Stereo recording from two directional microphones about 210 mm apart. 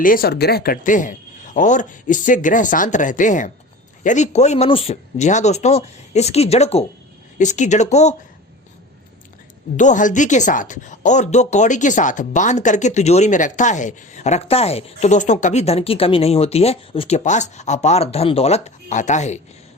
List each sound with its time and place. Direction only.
0.0 s speech: 45° left (ahead or behind)
9.7 s speech: 35° left (ahead or behind)